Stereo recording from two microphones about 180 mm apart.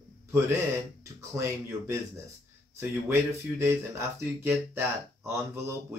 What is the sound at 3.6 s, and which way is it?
Speech, 15° right (ahead or behind).